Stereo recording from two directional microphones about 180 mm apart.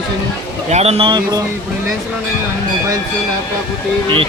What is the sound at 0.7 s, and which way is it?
Speech, 35° right (ahead or behind).